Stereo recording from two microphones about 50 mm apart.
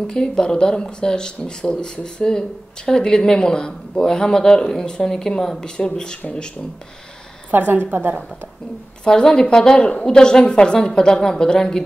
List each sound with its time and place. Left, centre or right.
0.0 s speech: centre
7.5 s a woman's voice: right
9.0 s speech: centre